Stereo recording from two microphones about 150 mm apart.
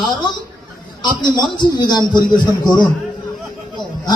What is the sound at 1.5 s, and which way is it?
Speech, 30° left (ahead or behind).